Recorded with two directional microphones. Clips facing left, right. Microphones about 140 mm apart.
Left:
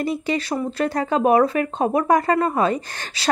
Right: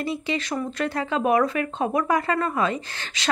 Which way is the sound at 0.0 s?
45° left (ahead or behind).